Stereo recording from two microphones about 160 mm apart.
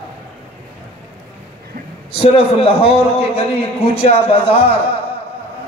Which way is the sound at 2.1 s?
35° left (ahead or behind).